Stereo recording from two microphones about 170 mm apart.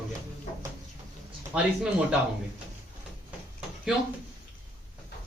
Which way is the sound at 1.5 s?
5° right (ahead or behind).